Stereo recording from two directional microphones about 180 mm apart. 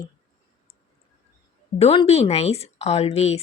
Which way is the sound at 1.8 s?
35° left (ahead or behind).